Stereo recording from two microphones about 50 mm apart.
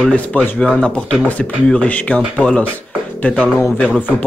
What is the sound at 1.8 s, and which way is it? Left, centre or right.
Speech, left.